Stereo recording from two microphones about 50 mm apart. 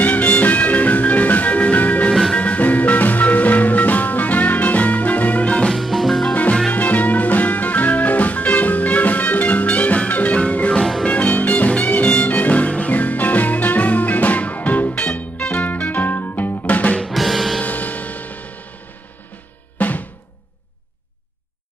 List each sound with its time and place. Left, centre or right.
0.0 s music: left
5.7 s music: centre
6.7 s music: left
10.8 s music: centre
11.1 s music: left
16.6 s music: left
17.1 s music: centre
17.6 s music: left
19.8 s drum: left